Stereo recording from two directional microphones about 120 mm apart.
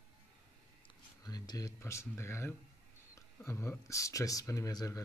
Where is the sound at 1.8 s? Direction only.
20° left (ahead or behind).